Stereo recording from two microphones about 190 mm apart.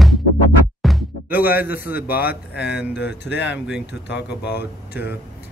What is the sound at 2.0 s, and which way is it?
Speech, 50° left (ahead or behind).